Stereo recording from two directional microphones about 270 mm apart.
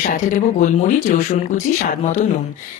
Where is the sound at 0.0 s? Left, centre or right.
Left.